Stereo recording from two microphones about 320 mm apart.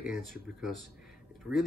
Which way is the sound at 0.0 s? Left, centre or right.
Centre.